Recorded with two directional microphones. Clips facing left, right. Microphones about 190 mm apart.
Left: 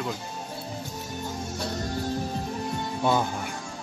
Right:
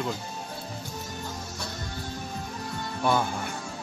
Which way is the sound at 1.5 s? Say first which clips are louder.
Left 6 dB; 40° left (ahead or behind).